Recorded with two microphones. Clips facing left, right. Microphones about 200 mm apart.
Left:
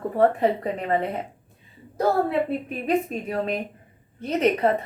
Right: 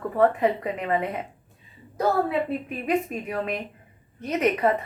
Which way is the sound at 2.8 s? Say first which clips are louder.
Left 2 dB; 30° left (ahead or behind).